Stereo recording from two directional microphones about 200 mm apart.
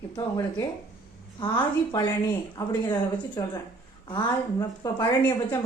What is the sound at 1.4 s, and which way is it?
A woman's voice, 20° left (ahead or behind).